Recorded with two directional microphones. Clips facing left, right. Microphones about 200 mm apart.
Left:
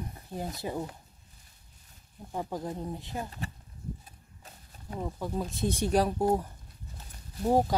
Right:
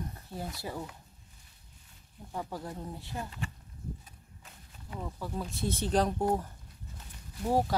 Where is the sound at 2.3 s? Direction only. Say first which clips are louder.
Left 4 dB; 20° left (ahead or behind).